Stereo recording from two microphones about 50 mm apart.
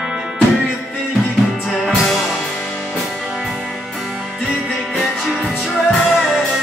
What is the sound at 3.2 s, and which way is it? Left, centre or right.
Music, centre.